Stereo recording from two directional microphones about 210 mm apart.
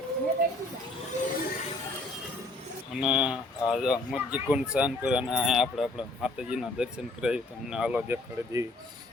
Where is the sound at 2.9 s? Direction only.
5° right (ahead or behind).